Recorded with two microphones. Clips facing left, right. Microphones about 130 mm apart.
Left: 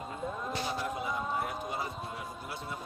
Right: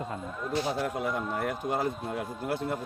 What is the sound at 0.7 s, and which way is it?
A man's voice, 75° right (ahead or behind).